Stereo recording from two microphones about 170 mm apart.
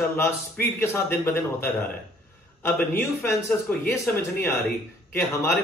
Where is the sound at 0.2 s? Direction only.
10° left (ahead or behind).